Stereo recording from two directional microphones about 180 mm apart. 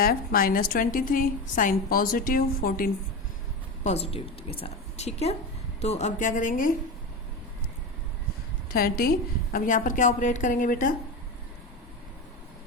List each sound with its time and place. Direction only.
0.0 s a woman's voice: 55° left (ahead or behind)
3.8 s a woman's voice: 35° left (ahead or behind)
8.7 s a woman's voice: 55° left (ahead or behind)